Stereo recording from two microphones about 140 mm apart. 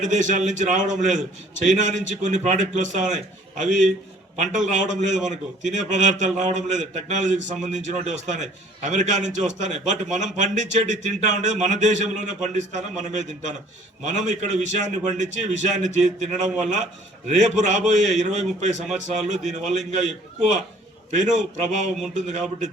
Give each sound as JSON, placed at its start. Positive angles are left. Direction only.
{"t": 0.0, "sound": "a man's voice", "side_deg": -60}
{"t": 21.1, "sound": "a man's voice", "side_deg": -60}